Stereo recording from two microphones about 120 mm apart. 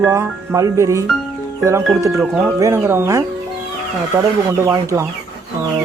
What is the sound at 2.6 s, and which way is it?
Speech, 25° right (ahead or behind).